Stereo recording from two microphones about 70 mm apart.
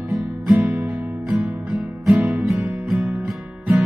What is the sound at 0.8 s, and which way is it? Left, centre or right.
Music, centre.